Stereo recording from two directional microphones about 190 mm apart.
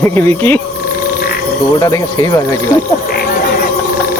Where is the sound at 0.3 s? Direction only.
10° left (ahead or behind).